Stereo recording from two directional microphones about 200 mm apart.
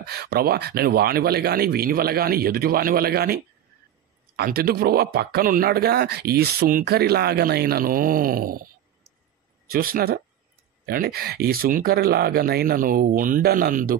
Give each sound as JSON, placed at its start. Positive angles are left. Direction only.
{"t": 0.0, "sound": "speech", "side_deg": -50}
{"t": 4.4, "sound": "speech", "side_deg": -50}
{"t": 9.7, "sound": "speech", "side_deg": -50}